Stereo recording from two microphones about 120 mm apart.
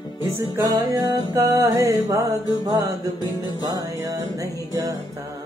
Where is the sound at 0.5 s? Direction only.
25° right (ahead or behind).